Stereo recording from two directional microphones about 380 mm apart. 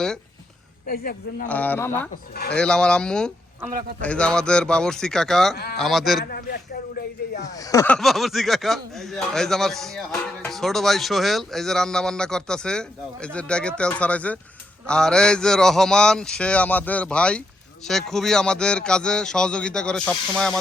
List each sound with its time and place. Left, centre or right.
0.9 s speech: left
1.5 s speech: centre
3.7 s a man's voice: right
4.0 s speech: centre
6.2 s speech: left
7.5 s speech: centre